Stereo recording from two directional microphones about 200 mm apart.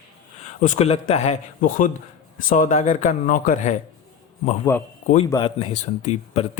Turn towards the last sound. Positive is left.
turn(degrees=30)  # may be behind; listen again after turning